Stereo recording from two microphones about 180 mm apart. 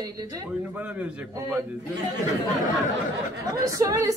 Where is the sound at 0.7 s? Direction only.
10° right (ahead or behind).